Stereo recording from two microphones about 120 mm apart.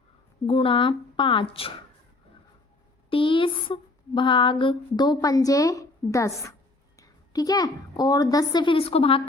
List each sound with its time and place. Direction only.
0.4 s speech: 50° left (ahead or behind)
3.1 s speech: 45° left (ahead or behind)